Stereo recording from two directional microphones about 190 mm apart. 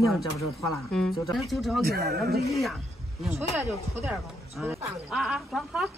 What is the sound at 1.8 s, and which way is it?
Speech, 55° right (ahead or behind).